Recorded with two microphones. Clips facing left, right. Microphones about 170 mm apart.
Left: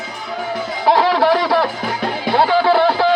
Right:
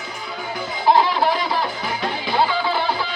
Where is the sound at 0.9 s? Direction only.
80° left.